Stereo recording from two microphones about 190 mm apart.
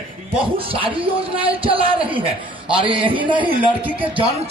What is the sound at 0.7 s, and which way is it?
A man's voice, 30° right (ahead or behind).